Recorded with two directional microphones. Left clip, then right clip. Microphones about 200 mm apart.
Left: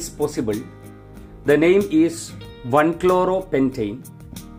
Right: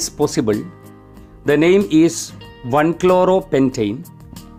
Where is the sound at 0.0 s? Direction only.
50° right (ahead or behind).